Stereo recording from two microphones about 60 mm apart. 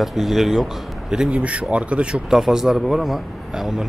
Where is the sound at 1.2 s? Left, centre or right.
Right.